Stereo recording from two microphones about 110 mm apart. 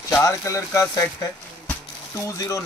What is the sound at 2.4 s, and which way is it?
Speech, 30° left (ahead or behind).